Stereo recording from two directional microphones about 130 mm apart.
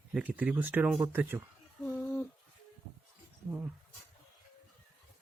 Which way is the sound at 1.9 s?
20° left (ahead or behind).